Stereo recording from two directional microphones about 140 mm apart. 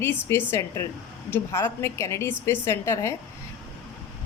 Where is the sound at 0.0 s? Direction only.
15° left (ahead or behind).